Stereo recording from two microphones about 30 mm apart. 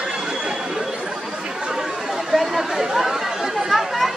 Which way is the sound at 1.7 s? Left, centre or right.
Centre.